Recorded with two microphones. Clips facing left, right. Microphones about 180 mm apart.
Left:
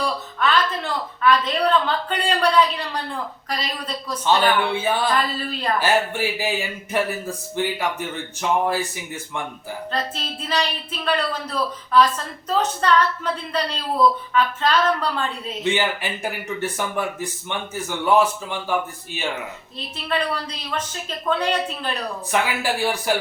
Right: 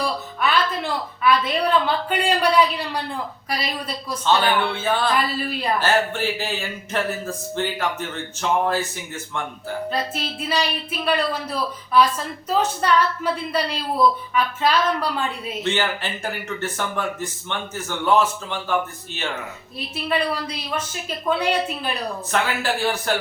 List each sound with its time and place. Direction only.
0.0 s a woman's voice: 10° right (ahead or behind)
4.3 s speech: 15° left (ahead or behind)
5.1 s a woman's voice: 10° right (ahead or behind)
5.8 s speech: 10° left (ahead or behind)
9.9 s a woman's voice: 10° right (ahead or behind)
15.6 s speech: 15° left (ahead or behind)
20.1 s a woman's voice: 10° right (ahead or behind)
22.3 s speech: 10° left (ahead or behind)